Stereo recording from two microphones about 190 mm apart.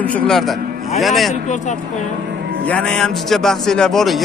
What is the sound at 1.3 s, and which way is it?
Speech, 40° left (ahead or behind).